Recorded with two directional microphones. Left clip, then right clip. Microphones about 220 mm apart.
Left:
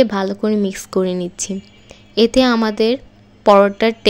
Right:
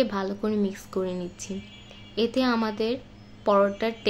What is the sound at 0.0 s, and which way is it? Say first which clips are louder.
A woman's voice: left 10 dB; 35° left (ahead or behind).